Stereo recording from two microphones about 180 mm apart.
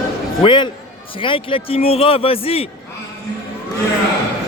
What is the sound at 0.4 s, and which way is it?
A man's voice, 25° left (ahead or behind).